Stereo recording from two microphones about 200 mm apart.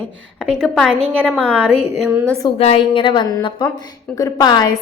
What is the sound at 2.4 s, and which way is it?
A woman's voice, 30° left (ahead or behind).